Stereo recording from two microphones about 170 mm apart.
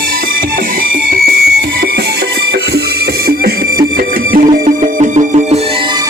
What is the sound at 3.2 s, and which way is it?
Music, 65° right (ahead or behind).